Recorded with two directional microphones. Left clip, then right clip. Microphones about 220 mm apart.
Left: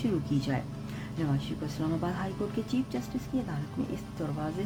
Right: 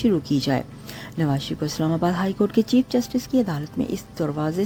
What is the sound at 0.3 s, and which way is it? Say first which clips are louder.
A woman's voice: right 9 dB; 35° right (ahead or behind).